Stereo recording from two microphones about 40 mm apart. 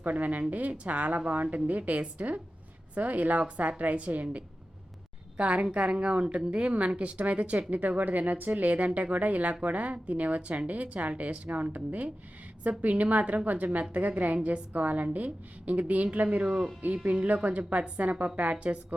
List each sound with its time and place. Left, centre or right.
0.0 s speech: right
16.4 s speech: right